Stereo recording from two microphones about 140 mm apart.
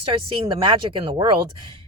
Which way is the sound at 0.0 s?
35° right (ahead or behind).